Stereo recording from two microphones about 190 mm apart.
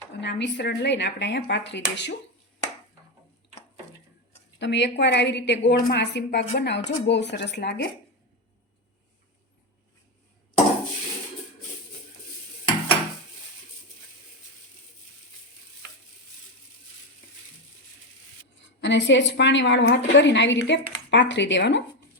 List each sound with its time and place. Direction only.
0.2 s speech: 65° left (ahead or behind)
4.6 s speech: 65° left (ahead or behind)
18.8 s a woman's voice: 70° left (ahead or behind)